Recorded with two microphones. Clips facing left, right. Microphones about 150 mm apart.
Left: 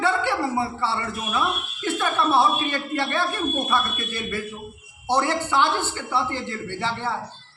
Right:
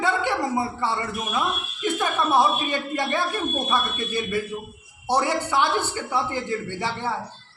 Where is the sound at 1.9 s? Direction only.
15° right (ahead or behind).